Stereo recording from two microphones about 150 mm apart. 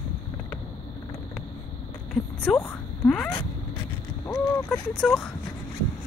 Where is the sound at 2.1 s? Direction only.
5° left (ahead or behind).